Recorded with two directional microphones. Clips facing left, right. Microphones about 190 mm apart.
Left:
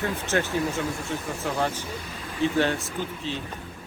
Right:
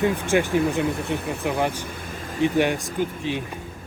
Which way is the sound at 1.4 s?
15° right (ahead or behind).